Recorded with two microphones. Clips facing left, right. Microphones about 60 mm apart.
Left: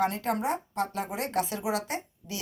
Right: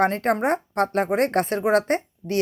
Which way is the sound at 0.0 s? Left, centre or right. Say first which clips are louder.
Right 7 dB; right.